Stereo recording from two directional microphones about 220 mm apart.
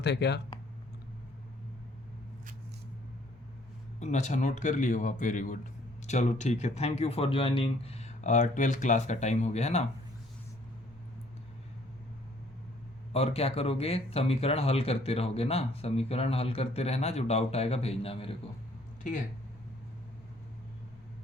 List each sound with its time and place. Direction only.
0.0 s speech: 50° left (ahead or behind)
4.0 s speech: 35° left (ahead or behind)
13.1 s speech: 25° left (ahead or behind)